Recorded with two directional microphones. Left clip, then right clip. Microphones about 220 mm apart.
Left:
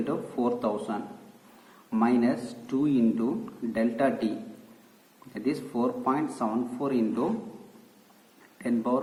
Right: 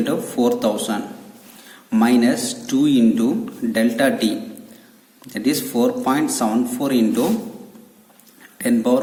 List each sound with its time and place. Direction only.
0.0 s a man's voice: 55° right (ahead or behind)
5.3 s a man's voice: 55° right (ahead or behind)
8.5 s speech: 55° right (ahead or behind)